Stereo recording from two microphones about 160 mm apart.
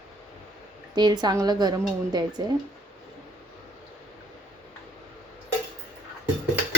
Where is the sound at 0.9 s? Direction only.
25° right (ahead or behind).